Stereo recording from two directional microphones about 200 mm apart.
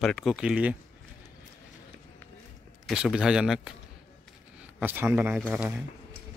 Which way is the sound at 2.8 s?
5° right (ahead or behind).